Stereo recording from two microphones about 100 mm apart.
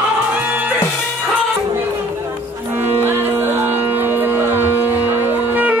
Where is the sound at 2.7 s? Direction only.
20° right (ahead or behind).